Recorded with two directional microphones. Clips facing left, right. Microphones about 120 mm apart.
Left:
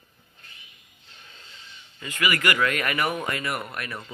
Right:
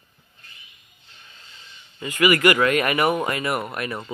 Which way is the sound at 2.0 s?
15° right (ahead or behind).